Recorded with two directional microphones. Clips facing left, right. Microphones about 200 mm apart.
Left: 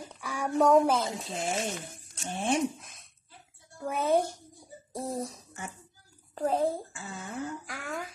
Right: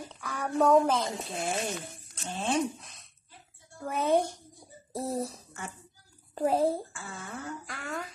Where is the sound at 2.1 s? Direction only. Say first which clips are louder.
Left 2 dB; 10° left (ahead or behind).